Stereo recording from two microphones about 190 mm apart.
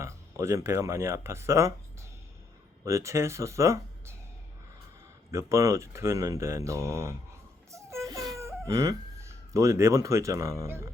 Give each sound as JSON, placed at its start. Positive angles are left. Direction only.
{"t": 0.0, "sound": "speech", "side_deg": -15}
{"t": 5.3, "sound": "speech", "side_deg": -15}
{"t": 7.7, "sound": "baby cry", "side_deg": -15}